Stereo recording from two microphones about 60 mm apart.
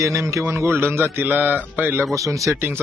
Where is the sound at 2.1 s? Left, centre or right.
Right.